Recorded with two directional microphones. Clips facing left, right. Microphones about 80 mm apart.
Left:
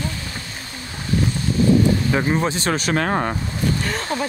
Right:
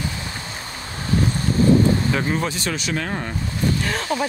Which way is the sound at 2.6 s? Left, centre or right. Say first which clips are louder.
Left 5 dB; left.